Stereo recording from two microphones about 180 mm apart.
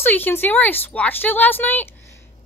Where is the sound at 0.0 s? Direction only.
10° left (ahead or behind).